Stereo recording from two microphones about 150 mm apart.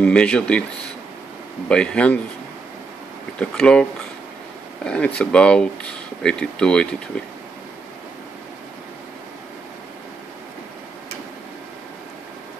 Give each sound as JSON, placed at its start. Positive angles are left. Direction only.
{"t": 0.0, "sound": "speech", "side_deg": 5}
{"t": 1.7, "sound": "speech", "side_deg": 5}
{"t": 3.3, "sound": "speech", "side_deg": 5}
{"t": 4.8, "sound": "speech", "side_deg": 5}